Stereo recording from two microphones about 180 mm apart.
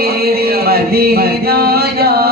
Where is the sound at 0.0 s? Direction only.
60° right (ahead or behind).